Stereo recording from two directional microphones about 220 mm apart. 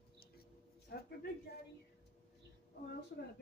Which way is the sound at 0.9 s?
45° left (ahead or behind).